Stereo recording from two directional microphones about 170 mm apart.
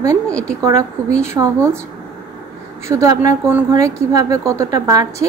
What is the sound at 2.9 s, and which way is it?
A woman's voice, 20° right (ahead or behind).